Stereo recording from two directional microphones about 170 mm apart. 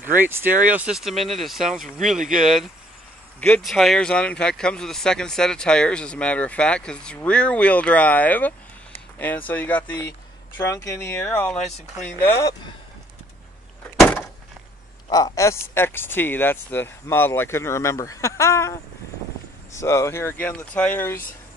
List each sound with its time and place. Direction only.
0.0 s speech: 10° right (ahead or behind)
1.7 s speech: 50° right (ahead or behind)
2.0 s speech: centre (ahead or behind); by 12.5 s 15° left (ahead or behind)
13.9 s door: 10° left (ahead or behind)
15.0 s speech: 20° left (ahead or behind)